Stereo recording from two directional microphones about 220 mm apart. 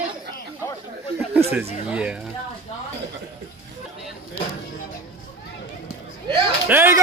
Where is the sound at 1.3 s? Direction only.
10° right (ahead or behind).